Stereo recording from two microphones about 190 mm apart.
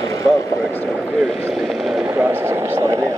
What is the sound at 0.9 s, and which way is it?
Speech, 5° right (ahead or behind).